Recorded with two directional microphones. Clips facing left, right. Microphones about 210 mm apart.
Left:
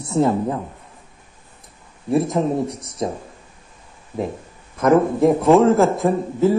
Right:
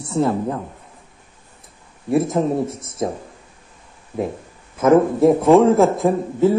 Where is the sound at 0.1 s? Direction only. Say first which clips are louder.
Left 1 dB; 20° left (ahead or behind).